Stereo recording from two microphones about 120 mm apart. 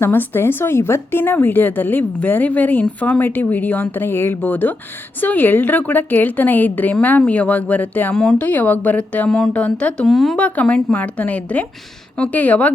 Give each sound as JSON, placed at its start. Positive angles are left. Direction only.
{"t": 0.0, "sound": "speech", "side_deg": 20}